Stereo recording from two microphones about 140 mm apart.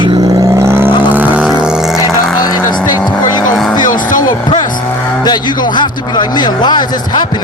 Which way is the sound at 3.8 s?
70° left (ahead or behind).